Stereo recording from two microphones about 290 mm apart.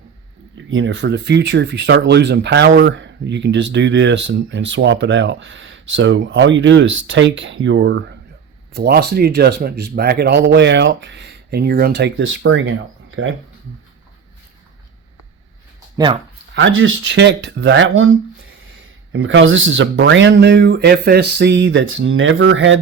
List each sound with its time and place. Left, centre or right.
0.5 s speech: right
16.0 s speech: centre
16.6 s speech: right